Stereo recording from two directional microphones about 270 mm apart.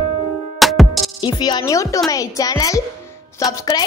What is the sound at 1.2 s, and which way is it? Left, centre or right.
A woman's voice, centre.